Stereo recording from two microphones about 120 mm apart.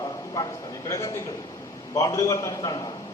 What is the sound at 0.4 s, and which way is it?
A man's voice, 25° left (ahead or behind).